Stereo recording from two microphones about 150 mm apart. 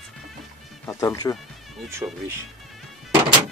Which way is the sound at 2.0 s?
20° right (ahead or behind).